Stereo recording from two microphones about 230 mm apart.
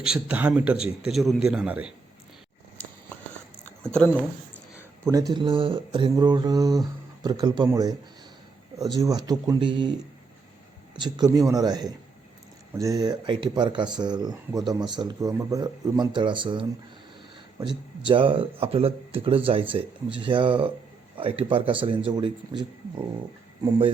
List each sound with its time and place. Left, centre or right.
0.0 s a man's voice: centre
3.8 s a man's voice: centre
4.8 s speech: centre
10.9 s speech: centre